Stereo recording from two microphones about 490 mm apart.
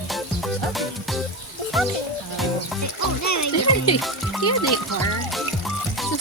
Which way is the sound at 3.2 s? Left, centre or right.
Left.